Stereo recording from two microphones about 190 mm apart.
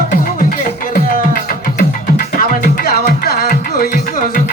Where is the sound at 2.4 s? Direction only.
50° left (ahead or behind).